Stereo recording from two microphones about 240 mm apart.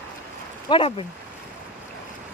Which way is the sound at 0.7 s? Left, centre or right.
Left.